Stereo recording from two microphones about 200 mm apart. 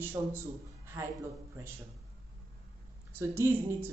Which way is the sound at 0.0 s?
10° right (ahead or behind).